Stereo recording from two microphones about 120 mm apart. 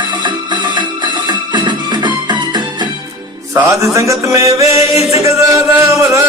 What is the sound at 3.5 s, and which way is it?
Music, 25° right (ahead or behind).